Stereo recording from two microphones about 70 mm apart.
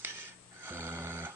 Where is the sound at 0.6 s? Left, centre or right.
Right.